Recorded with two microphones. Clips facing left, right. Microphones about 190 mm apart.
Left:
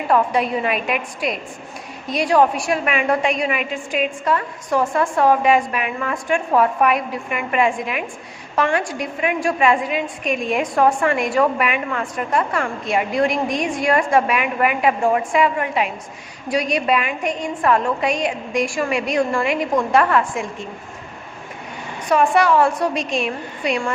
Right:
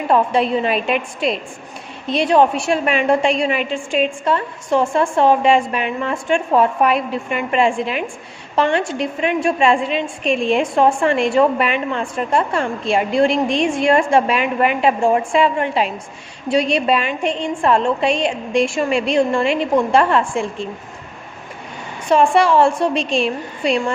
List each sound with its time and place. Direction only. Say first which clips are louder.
0.1 s a woman's voice: right 2 dB; 25° right (ahead or behind)
22.1 s a woman's voice: right 2 dB; 30° right (ahead or behind)